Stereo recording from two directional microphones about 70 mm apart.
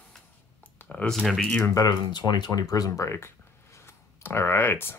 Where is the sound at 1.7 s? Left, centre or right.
Left.